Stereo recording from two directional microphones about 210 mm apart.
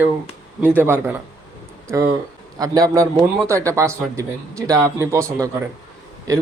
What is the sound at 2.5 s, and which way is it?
Speech, 15° right (ahead or behind).